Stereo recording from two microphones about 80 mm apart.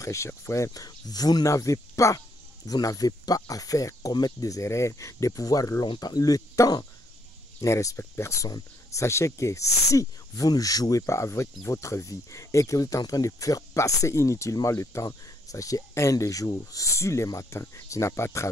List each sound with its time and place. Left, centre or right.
0.0 s speech: left
0.8 s speech: left